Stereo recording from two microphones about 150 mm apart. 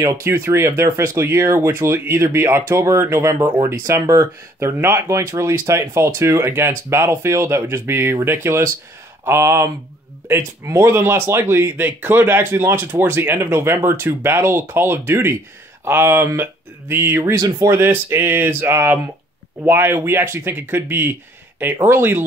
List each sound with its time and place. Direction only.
0.0 s speech: 20° right (ahead or behind)